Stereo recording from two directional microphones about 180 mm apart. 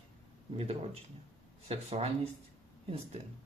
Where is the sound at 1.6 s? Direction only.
35° right (ahead or behind).